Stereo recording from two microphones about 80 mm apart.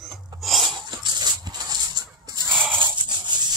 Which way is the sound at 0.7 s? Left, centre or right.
Right.